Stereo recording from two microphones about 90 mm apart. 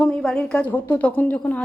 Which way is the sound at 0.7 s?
20° left (ahead or behind).